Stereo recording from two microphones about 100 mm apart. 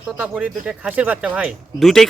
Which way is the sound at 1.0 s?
10° right (ahead or behind).